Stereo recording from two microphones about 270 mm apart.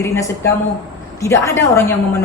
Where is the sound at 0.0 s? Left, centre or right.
Centre.